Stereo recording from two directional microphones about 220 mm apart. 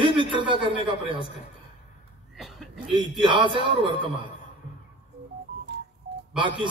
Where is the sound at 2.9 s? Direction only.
20° right (ahead or behind).